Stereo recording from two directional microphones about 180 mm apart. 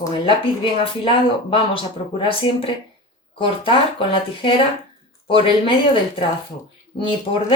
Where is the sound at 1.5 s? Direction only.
30° left (ahead or behind).